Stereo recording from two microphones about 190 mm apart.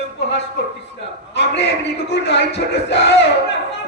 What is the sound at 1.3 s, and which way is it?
A man's voice, 65° left (ahead or behind).